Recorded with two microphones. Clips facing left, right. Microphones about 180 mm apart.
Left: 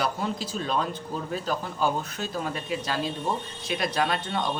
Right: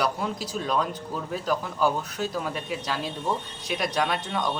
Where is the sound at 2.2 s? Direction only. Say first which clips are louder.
Right 2 dB; 10° right (ahead or behind).